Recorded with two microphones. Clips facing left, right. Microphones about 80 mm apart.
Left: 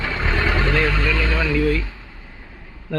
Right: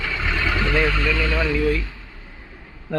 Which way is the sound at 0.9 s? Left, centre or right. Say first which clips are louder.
Even; left.